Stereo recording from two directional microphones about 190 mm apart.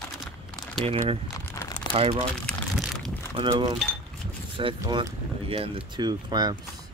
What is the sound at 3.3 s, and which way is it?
Speech, 25° right (ahead or behind).